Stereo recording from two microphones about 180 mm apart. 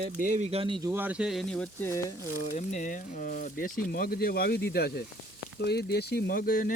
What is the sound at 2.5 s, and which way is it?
Speech, 40° left (ahead or behind).